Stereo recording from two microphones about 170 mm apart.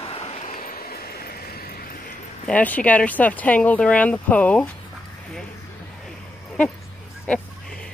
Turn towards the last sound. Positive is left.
turn(degrees=10)  # may be behind; listen again after turning